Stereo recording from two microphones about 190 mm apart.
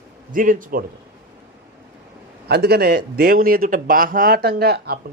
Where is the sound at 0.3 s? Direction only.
45° right (ahead or behind).